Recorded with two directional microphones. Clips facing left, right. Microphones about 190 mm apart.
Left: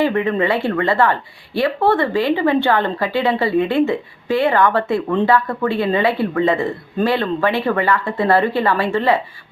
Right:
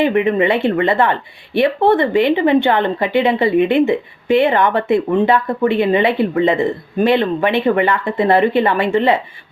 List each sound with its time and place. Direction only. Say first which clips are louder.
0.0 s speech: right 3 dB; 20° right (ahead or behind)